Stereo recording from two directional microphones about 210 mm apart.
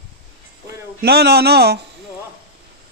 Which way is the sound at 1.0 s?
50° right (ahead or behind).